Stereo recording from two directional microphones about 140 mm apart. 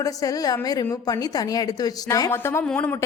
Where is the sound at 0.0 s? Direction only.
25° left (ahead or behind); by 2.9 s 10° left (ahead or behind).